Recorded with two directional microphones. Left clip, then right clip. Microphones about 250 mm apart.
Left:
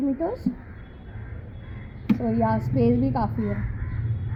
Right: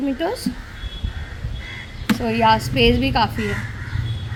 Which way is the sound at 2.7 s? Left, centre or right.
Centre.